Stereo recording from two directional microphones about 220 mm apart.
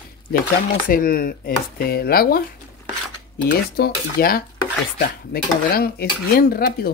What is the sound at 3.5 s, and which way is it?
Dishes, 45° left (ahead or behind).